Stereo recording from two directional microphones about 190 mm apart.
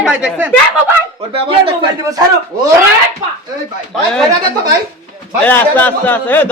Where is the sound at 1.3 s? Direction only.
30° right (ahead or behind).